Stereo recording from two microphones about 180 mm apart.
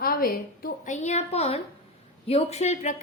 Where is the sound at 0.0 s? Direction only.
55° left (ahead or behind).